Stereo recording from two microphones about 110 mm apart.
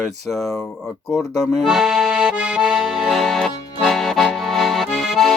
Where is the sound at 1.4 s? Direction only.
Centre (ahead or behind).